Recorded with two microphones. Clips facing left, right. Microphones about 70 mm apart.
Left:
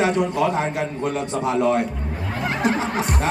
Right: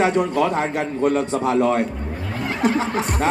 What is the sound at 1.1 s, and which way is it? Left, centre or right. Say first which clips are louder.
Speech: right 3 dB; centre.